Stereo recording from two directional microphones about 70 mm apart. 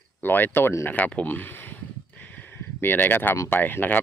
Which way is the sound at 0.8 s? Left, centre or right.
Centre.